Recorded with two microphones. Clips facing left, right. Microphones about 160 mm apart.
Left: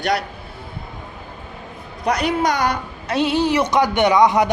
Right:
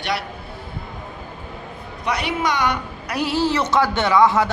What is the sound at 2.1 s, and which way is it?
Speech, 40° left (ahead or behind).